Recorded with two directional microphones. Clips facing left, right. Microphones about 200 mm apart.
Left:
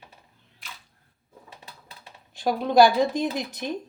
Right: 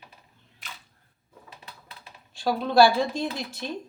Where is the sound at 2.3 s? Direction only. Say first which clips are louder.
Left 1 dB; 15° left (ahead or behind).